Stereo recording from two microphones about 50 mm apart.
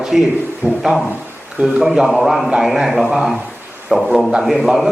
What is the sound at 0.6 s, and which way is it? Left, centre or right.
Speech, right.